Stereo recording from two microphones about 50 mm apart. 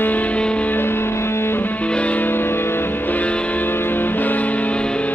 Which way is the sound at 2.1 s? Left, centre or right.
Left.